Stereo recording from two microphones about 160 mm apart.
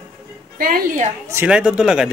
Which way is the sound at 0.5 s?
65° right (ahead or behind).